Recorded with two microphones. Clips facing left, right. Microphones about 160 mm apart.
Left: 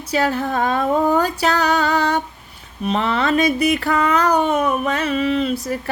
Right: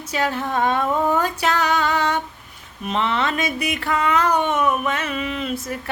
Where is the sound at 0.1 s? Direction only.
40° left (ahead or behind).